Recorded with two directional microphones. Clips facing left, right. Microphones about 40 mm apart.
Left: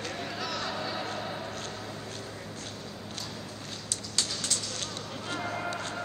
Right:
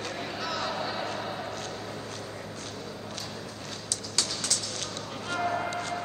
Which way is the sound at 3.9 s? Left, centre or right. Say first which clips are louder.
Right 1 dB; left.